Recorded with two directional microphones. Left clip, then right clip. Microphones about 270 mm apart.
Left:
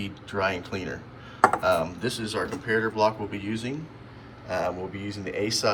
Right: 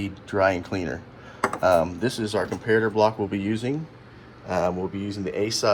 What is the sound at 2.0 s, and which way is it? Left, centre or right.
Speech, centre.